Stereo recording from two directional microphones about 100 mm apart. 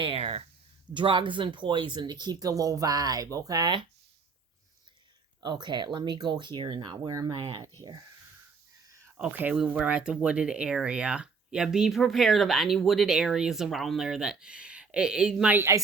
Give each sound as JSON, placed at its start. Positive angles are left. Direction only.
{"t": 0.0, "sound": "a sound", "side_deg": -65}
{"t": 0.9, "sound": "speech", "side_deg": -55}
{"t": 5.4, "sound": "speech", "side_deg": -50}
{"t": 7.3, "sound": "speech", "side_deg": -55}
{"t": 9.1, "sound": "speech", "side_deg": -10}
{"t": 15.5, "sound": "speech", "side_deg": -25}